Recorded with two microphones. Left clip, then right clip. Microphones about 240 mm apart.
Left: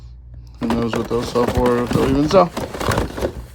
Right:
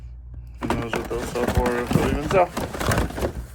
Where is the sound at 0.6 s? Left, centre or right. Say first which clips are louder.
Left 5 dB; centre.